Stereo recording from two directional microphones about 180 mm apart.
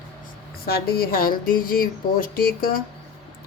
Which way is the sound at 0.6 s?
55° left (ahead or behind).